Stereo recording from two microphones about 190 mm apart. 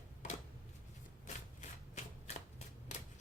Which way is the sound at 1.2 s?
35° left (ahead or behind).